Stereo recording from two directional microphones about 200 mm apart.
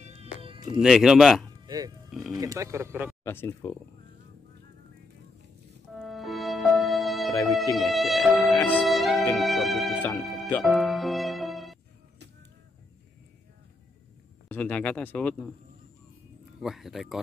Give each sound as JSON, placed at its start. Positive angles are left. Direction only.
{"t": 0.0, "sound": "cat", "side_deg": -30}
{"t": 0.7, "sound": "speech", "side_deg": 0}
{"t": 2.0, "sound": "music", "side_deg": 0}
{"t": 2.3, "sound": "speech", "side_deg": -15}
{"t": 3.3, "sound": "speech", "side_deg": 10}
{"t": 5.9, "sound": "music", "side_deg": 0}
{"t": 7.7, "sound": "speech", "side_deg": 0}
{"t": 8.5, "sound": "music", "side_deg": 10}
{"t": 14.5, "sound": "speech", "side_deg": 5}
{"t": 16.6, "sound": "speech", "side_deg": 0}